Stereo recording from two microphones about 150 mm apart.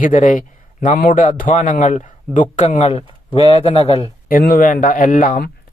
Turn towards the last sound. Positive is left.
turn(degrees=75)  # may be behind; listen again after turning